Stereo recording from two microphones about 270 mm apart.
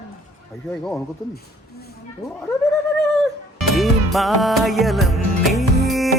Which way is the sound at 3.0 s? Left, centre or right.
Centre.